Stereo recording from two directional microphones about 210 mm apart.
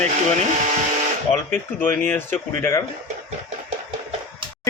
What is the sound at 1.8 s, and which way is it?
Speech, 10° left (ahead or behind).